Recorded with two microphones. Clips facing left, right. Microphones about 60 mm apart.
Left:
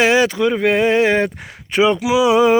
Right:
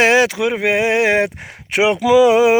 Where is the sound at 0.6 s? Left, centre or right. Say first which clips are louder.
Left 1 dB; right.